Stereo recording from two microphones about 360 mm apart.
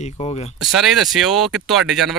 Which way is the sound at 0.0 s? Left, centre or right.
Centre.